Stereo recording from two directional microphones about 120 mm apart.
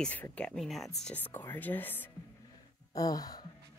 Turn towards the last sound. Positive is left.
turn(degrees=30)  # may be behind; listen again after turning